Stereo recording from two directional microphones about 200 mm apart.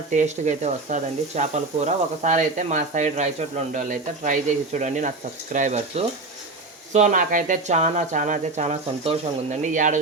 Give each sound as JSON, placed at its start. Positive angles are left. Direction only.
{"t": 0.1, "sound": "speech", "side_deg": -35}